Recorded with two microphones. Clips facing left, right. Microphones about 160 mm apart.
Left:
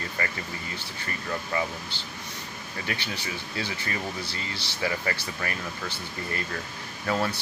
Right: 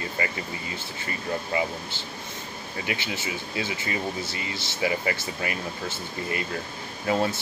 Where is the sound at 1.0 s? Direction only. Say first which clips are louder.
Right 3 dB; 15° right (ahead or behind).